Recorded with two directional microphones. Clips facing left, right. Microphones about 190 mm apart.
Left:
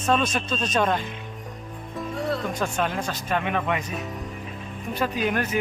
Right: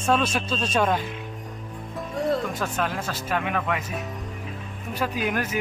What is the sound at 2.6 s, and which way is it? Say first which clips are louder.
Speech: left 1 dB; 5° right (ahead or behind).